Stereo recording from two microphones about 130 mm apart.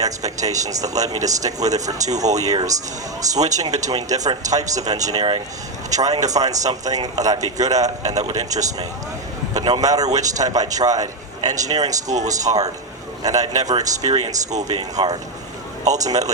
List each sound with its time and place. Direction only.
0.0 s speech: 30° right (ahead or behind)
12.0 s speech: 65° right (ahead or behind)
12.4 s speech: 30° right (ahead or behind)